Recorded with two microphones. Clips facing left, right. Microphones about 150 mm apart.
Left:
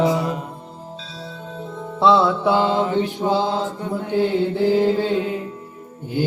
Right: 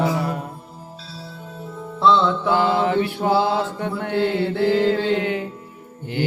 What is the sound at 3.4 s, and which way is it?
Mantra, 75° right (ahead or behind).